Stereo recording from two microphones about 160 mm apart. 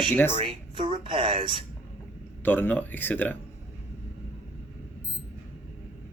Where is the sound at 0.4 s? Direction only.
30° right (ahead or behind).